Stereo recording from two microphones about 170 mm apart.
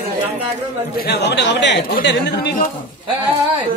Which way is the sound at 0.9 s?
75° left (ahead or behind).